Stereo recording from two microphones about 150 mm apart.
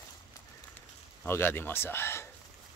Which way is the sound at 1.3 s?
15° left (ahead or behind).